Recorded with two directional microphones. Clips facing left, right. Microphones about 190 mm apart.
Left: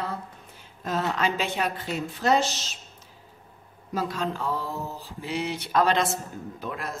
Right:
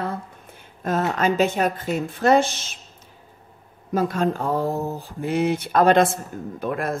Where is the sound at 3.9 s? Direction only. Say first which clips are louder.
Right 7 dB; 50° right (ahead or behind).